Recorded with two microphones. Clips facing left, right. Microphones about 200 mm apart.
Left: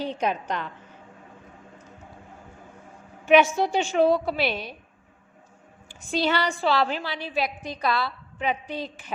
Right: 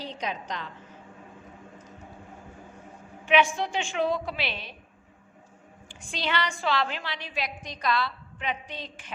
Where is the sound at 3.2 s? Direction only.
45° left (ahead or behind).